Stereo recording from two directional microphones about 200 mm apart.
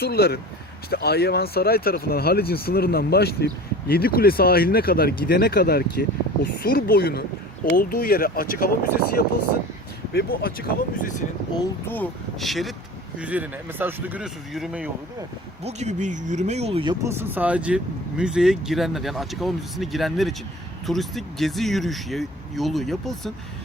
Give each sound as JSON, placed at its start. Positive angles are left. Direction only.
{"t": 0.0, "sound": "speech", "side_deg": 50}
{"t": 11.9, "sound": "speech", "side_deg": 5}
{"t": 15.6, "sound": "speech", "side_deg": -35}